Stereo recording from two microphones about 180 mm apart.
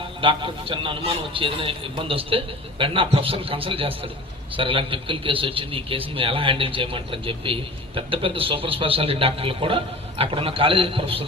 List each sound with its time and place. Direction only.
0.2 s a man's voice: 30° right (ahead or behind)